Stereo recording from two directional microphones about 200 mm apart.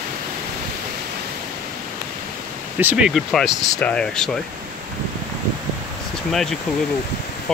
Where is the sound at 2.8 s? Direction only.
5° right (ahead or behind).